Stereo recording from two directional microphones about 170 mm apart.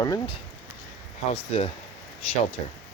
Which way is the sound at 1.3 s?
35° left (ahead or behind).